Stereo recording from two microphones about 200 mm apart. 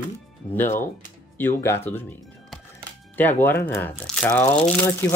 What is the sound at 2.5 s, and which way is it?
Music, centre (ahead or behind).